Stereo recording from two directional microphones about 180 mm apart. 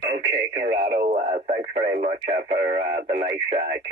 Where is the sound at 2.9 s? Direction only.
55° right (ahead or behind).